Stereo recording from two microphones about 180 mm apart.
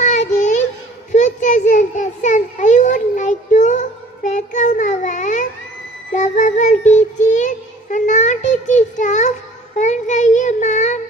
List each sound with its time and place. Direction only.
0.0 s child singing: 40° left (ahead or behind)
1.1 s a sound: 45° left (ahead or behind)
6.1 s child singing: 45° left (ahead or behind)